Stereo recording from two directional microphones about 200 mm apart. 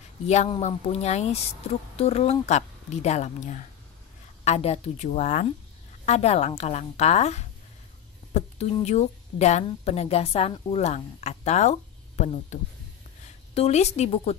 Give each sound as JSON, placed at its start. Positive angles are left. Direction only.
{"t": 0.3, "sound": "speech", "side_deg": 35}
{"t": 13.6, "sound": "speech", "side_deg": 30}